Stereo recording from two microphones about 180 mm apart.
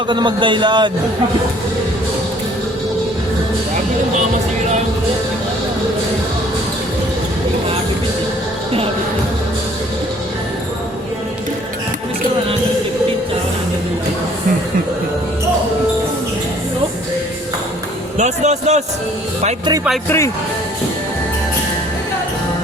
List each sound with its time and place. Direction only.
0.1 s a man's voice: 25° right (ahead or behind)
18.2 s a man's voice: 40° right (ahead or behind)
20.1 s speech: 15° left (ahead or behind)